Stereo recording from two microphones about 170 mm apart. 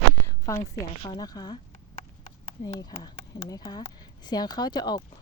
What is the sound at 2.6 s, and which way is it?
Speech, 20° left (ahead or behind).